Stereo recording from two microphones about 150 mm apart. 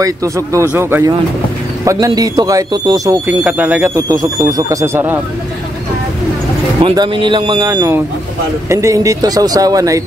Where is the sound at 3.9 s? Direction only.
20° right (ahead or behind).